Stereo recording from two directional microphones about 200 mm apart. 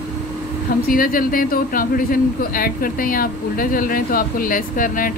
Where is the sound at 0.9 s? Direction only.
45° left (ahead or behind).